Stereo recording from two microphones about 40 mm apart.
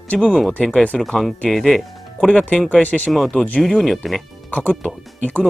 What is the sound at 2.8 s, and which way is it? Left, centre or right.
Speech, left.